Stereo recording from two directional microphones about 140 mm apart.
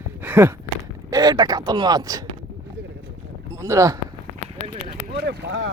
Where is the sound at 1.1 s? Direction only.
25° right (ahead or behind).